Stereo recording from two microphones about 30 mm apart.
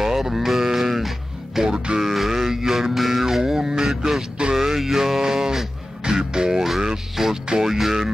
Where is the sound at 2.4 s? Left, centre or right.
Centre.